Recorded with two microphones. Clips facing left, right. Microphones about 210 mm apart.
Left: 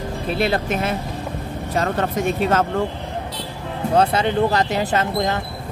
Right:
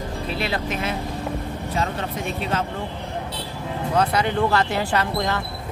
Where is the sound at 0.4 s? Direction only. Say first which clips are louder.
Left 6 dB; 50° left (ahead or behind).